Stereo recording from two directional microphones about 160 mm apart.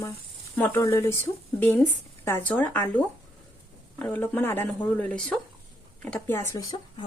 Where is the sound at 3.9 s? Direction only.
10° left (ahead or behind).